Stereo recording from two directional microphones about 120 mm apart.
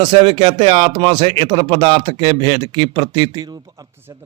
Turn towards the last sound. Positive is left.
turn(degrees=-25)  # may be behind; listen again after turning